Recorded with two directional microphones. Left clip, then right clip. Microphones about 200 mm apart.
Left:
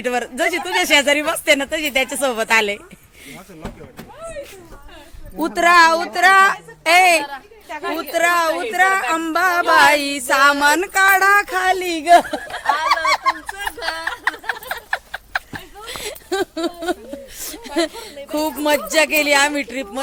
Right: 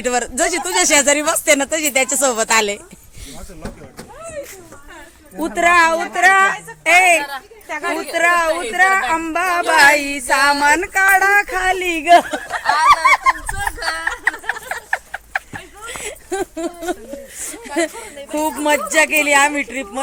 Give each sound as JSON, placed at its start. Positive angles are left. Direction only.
{"t": 0.0, "sound": "speech", "side_deg": -5}
{"t": 5.4, "sound": "speech", "side_deg": 5}
{"t": 7.2, "sound": "speech", "side_deg": -25}
{"t": 7.7, "sound": "a woman's voice", "side_deg": -40}
{"t": 8.1, "sound": "speech", "side_deg": 15}
{"t": 10.1, "sound": "music", "side_deg": 20}
{"t": 10.4, "sound": "speech", "side_deg": 25}
{"t": 13.8, "sound": "a sound", "side_deg": 15}
{"t": 17.4, "sound": "speech", "side_deg": 15}